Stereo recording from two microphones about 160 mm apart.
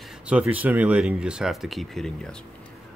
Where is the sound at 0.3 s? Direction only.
10° right (ahead or behind).